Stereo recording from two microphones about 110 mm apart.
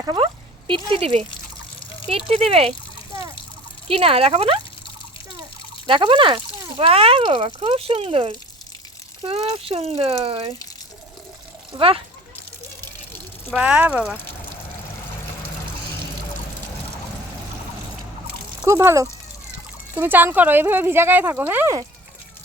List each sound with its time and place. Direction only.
0.0 s speech: 45° right (ahead or behind); by 1.2 s 60° right (ahead or behind)
1.8 s water: 50° left (ahead or behind)
2.0 s speech: 60° right (ahead or behind)
3.8 s speech: 60° right (ahead or behind)
5.9 s speech: 50° right (ahead or behind)
11.7 s speech: 50° right (ahead or behind)
13.5 s speech: 10° right (ahead or behind)
18.6 s speech: 25° right (ahead or behind)